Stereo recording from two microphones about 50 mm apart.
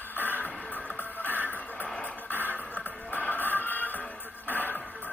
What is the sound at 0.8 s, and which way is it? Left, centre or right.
Music, left.